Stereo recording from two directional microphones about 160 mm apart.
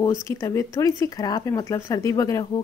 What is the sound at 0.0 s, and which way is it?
Speech, 20° left (ahead or behind).